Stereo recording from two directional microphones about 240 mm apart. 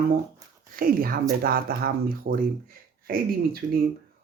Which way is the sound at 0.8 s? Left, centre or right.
Right.